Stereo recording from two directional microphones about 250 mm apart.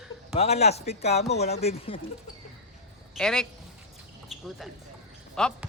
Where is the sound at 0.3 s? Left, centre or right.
Left.